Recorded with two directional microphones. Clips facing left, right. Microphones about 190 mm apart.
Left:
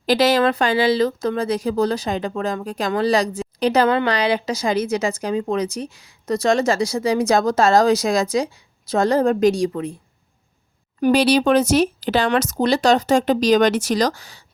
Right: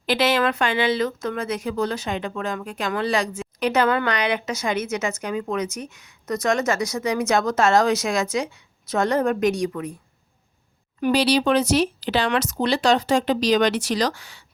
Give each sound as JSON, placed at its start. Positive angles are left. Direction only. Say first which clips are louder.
{"t": 0.0, "sound": "speech", "louder": "left 4 dB", "side_deg": 40}
{"t": 11.0, "sound": "speech", "louder": "left 4 dB", "side_deg": 50}